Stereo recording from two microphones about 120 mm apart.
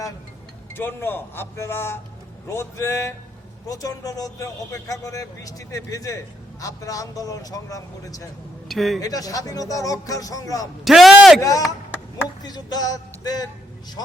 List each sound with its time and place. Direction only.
0.7 s speech: 20° left (ahead or behind)
8.6 s a man's voice: centre (ahead or behind)
9.0 s speech: 30° left (ahead or behind)
10.8 s a man's voice: centre (ahead or behind)
11.3 s speech: 30° left (ahead or behind)